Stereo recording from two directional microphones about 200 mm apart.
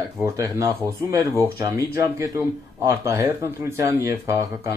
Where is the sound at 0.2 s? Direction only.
15° right (ahead or behind).